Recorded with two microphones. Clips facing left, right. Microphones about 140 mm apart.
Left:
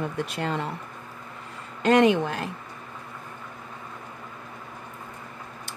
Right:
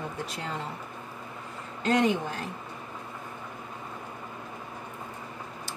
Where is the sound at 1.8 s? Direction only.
90° left.